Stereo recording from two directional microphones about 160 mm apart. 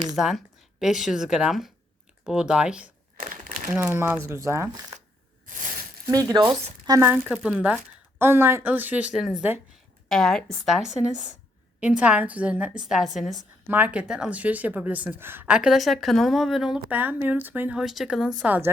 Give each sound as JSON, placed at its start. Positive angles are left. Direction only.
{"t": 0.2, "sound": "speech", "side_deg": 0}
{"t": 3.2, "sound": "crumpling", "side_deg": -60}
{"t": 3.8, "sound": "a woman's voice", "side_deg": -15}
{"t": 5.5, "sound": "a sound", "side_deg": -55}
{"t": 6.1, "sound": "a woman's voice", "side_deg": -20}
{"t": 13.7, "sound": "a woman's voice", "side_deg": -10}